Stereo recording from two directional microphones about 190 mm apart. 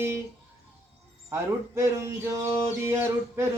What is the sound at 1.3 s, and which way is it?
Male singing, 15° right (ahead or behind).